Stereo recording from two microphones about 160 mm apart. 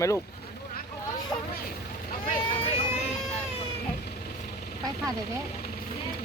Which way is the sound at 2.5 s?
35° left (ahead or behind).